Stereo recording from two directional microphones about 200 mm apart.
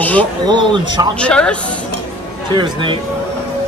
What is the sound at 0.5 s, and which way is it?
Speech, 20° right (ahead or behind).